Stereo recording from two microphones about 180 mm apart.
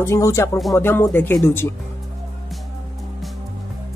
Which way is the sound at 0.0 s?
15° left (ahead or behind).